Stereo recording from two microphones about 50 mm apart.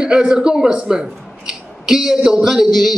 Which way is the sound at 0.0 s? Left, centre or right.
Centre.